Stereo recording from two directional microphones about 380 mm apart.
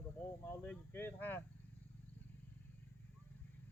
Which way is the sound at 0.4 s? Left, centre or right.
Centre.